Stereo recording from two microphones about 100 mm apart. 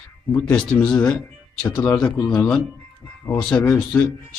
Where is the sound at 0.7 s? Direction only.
10° left (ahead or behind).